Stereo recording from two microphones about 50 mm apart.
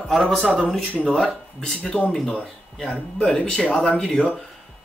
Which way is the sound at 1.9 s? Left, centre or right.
Left.